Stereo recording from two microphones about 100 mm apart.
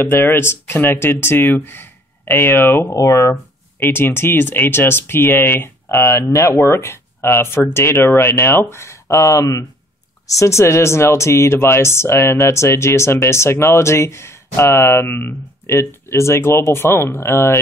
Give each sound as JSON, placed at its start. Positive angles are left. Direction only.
{"t": 0.0, "sound": "speech", "side_deg": 25}